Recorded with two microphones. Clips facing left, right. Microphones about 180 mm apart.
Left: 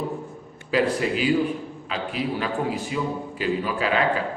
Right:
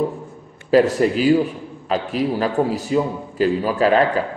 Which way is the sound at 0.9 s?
45° right (ahead or behind).